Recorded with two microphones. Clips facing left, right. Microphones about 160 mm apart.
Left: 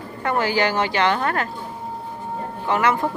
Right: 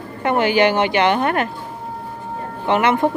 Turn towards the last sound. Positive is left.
turn(degrees=-20)  # may be behind; listen again after turning